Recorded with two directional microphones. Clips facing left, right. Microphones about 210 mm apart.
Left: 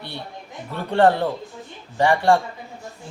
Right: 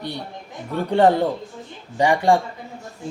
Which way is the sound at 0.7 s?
15° right (ahead or behind).